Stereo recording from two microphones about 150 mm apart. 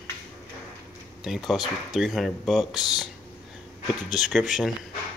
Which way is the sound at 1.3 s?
Centre (ahead or behind).